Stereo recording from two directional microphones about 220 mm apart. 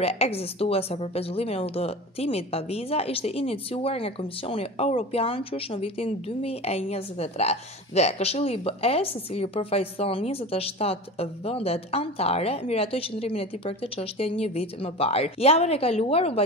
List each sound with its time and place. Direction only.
0.0 s a woman's voice: 30° left (ahead or behind)